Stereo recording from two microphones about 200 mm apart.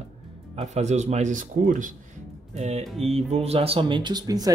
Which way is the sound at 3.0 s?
30° right (ahead or behind).